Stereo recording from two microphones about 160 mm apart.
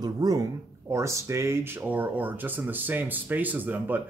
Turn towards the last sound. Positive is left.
turn(degrees=-10)  # may be behind; listen again after turning